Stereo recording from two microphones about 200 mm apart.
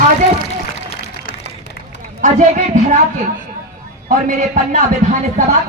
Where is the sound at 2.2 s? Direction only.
40° right (ahead or behind).